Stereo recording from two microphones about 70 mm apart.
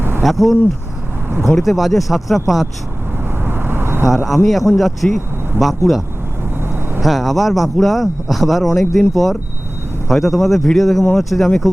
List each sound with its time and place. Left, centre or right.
0.2 s speech: centre
3.4 s vehicle: right
4.0 s speech: centre
7.0 s speech: centre